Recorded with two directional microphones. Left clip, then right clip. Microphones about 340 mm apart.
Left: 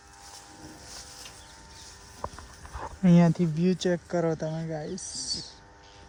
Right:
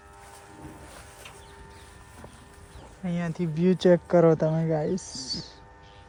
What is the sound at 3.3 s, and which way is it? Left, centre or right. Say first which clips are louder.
Speech: right 2 dB; centre.